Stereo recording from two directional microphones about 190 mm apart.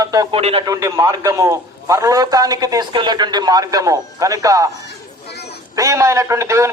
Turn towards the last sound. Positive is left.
turn(degrees=-15)  # may be behind; listen again after turning